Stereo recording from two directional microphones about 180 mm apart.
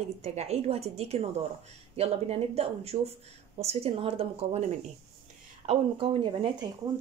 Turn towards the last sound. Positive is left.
turn(degrees=-30)  # may be behind; listen again after turning